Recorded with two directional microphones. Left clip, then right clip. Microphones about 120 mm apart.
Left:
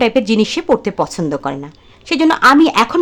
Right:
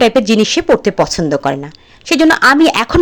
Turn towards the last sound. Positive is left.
turn(degrees=-30)  # may be behind; listen again after turning